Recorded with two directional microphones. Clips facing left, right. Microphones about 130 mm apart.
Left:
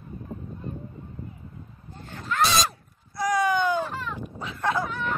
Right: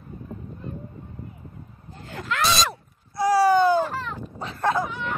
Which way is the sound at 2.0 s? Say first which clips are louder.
Even; 90° right.